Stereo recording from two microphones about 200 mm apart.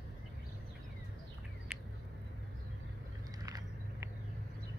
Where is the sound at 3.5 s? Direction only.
15° right (ahead or behind).